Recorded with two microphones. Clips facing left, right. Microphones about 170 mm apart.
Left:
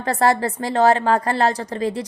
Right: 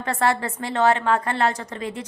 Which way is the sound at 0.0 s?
35° left (ahead or behind).